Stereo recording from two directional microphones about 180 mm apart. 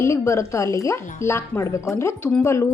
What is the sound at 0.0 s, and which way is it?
A woman's voice, 15° left (ahead or behind).